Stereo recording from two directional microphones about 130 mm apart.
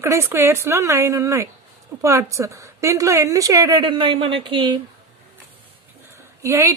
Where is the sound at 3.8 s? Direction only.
40° right (ahead or behind).